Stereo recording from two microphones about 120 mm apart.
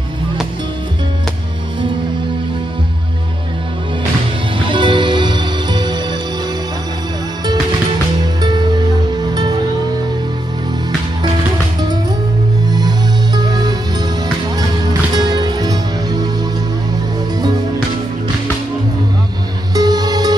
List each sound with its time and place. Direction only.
4.6 s music: 40° right (ahead or behind)
8.4 s music: 35° right (ahead or behind)
12.7 s music: 35° right (ahead or behind)
19.7 s music: 35° right (ahead or behind)